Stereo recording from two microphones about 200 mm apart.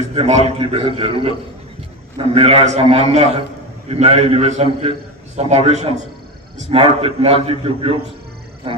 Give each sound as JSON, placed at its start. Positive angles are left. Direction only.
{"t": 0.1, "sound": "a man's voice", "side_deg": -30}